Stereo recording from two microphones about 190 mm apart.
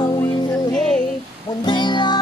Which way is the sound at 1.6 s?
25° left (ahead or behind).